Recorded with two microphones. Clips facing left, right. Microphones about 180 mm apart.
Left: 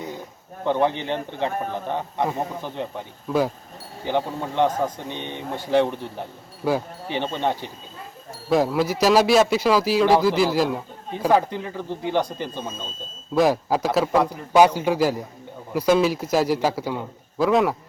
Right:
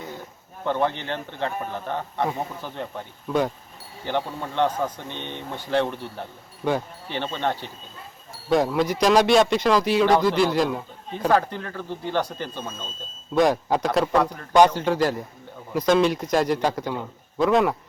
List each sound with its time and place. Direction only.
0.6 s speech: 15° left (ahead or behind)
6.7 s speech: 5° left (ahead or behind)
8.4 s speech: 5° left (ahead or behind)
13.3 s speech: 5° left (ahead or behind)